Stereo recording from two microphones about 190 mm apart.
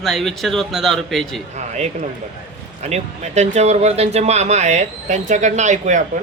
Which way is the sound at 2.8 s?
35° right (ahead or behind).